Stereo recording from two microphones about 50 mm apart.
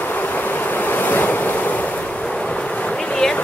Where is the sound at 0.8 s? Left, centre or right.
Left.